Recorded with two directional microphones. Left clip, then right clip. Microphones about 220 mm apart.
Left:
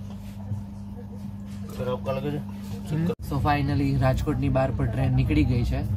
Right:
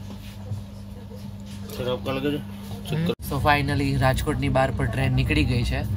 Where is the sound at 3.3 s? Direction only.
Centre (ahead or behind).